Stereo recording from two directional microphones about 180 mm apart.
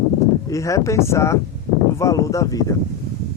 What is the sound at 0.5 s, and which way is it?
Speech, 15° left (ahead or behind).